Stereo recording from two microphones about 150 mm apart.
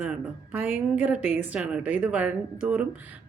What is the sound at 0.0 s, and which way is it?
Speech, 10° right (ahead or behind).